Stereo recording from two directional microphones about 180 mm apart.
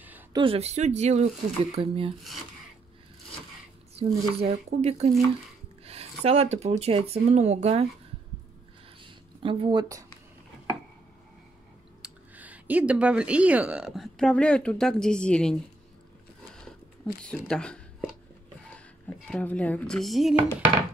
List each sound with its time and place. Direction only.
0.3 s speech: 30° right (ahead or behind)
3.9 s speech: 35° right (ahead or behind)
9.0 s a sound: 30° right (ahead or behind)
12.0 s speech: 10° right (ahead or behind)
16.5 s a sound: 5° left (ahead or behind)
19.0 s chopping: 5° left (ahead or behind)